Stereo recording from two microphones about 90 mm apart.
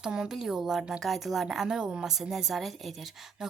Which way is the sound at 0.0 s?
10° right (ahead or behind).